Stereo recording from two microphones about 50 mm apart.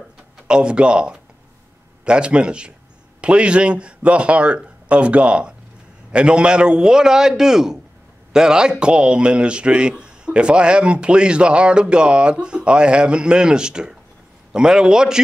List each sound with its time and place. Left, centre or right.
0.5 s a man's voice: centre